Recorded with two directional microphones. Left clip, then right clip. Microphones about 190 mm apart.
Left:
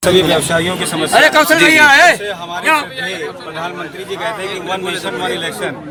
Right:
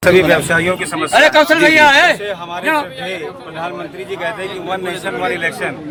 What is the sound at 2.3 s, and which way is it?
Speech, 25° right (ahead or behind).